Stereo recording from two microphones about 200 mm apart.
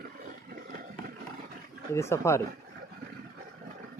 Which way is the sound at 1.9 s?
15° left (ahead or behind).